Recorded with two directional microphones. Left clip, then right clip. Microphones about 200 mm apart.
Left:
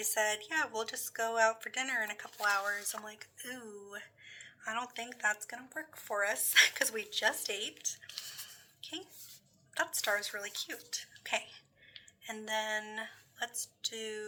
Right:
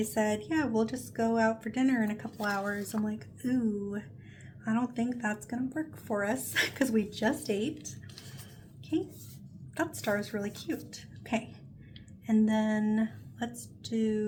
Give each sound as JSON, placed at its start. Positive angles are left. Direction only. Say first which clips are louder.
{"t": 0.0, "sound": "speech", "louder": "right 2 dB", "side_deg": 20}
{"t": 8.8, "sound": "a sound", "louder": "right 11 dB", "side_deg": 10}
{"t": 9.7, "sound": "speech", "louder": "right 1 dB", "side_deg": 10}